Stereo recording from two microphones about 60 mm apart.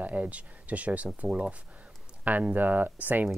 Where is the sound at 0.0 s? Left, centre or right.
Right.